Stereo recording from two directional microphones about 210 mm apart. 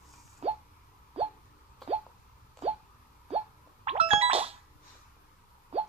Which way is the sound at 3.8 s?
25° right (ahead or behind).